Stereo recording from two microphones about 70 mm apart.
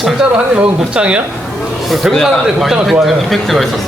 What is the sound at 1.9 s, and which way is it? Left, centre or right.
Speech, centre.